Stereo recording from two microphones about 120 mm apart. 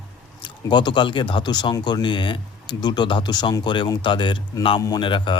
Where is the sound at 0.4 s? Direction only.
40° left (ahead or behind).